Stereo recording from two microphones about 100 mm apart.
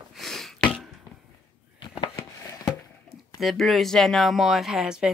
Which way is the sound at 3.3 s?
Centre (ahead or behind).